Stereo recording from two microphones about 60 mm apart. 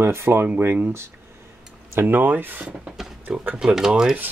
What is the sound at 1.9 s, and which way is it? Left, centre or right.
Speech, right.